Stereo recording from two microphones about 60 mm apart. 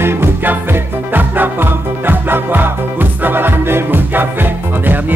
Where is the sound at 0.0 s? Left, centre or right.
Right.